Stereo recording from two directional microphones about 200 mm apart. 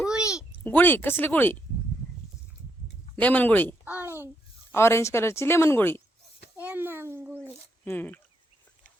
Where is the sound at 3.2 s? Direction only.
10° left (ahead or behind).